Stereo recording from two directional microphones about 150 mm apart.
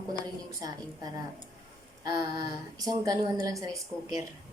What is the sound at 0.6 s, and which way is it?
A woman's voice, 25° right (ahead or behind).